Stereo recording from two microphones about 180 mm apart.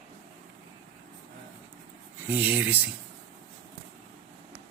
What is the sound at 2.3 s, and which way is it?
Speech, 10° right (ahead or behind).